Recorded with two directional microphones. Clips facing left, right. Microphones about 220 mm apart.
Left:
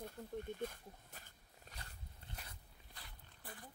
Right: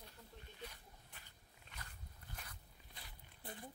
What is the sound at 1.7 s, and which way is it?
Dog, 40° left (ahead or behind).